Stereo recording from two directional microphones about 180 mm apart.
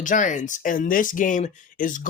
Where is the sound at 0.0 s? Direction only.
45° left (ahead or behind).